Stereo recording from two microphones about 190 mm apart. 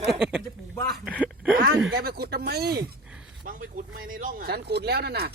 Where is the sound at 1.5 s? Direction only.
50° right (ahead or behind).